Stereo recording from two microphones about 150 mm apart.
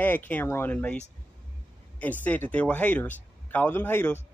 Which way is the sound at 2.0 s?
10° left (ahead or behind).